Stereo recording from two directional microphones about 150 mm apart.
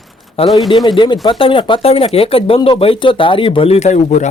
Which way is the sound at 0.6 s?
35° left (ahead or behind).